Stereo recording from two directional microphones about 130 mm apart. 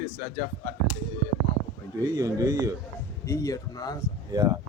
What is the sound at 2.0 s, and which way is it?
Speech, 25° right (ahead or behind).